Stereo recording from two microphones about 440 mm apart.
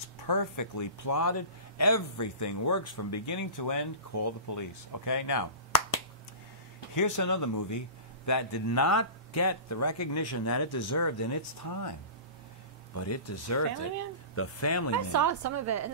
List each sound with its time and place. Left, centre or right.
0.3 s speech: left
7.0 s speech: left
12.9 s speech: left
15.0 s a woman's voice: right